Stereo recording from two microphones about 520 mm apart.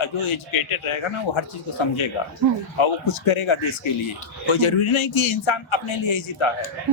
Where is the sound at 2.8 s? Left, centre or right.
Left.